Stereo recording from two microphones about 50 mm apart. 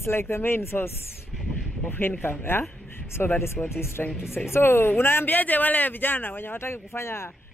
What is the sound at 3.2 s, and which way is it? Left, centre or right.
Speech, left.